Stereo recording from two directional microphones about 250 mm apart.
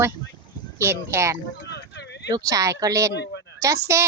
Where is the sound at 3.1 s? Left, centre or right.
Left.